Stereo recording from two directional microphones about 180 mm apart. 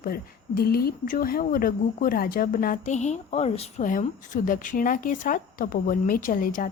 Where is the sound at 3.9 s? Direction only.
50° left (ahead or behind).